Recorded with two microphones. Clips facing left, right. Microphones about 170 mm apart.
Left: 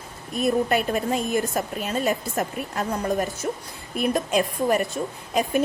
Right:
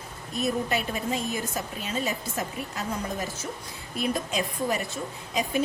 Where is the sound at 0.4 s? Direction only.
55° left (ahead or behind).